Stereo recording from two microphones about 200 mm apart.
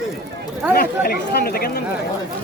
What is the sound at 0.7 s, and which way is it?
Speech, 50° left (ahead or behind).